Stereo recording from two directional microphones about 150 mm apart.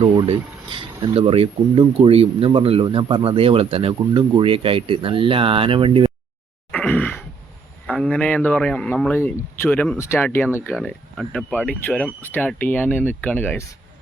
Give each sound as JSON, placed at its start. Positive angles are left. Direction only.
{"t": 0.3, "sound": "speech", "side_deg": -35}
{"t": 6.7, "sound": "a sound", "side_deg": 10}
{"t": 7.9, "sound": "speech", "side_deg": 5}
{"t": 10.0, "sound": "speech", "side_deg": 20}
{"t": 10.8, "sound": "speech", "side_deg": 5}